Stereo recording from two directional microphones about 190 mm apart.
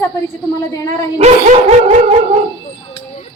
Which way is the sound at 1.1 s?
35° right (ahead or behind).